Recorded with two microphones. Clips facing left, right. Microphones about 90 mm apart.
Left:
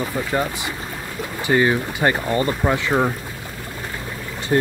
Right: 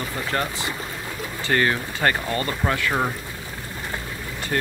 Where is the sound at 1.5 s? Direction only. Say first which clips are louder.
Left 4 dB; 15° left (ahead or behind).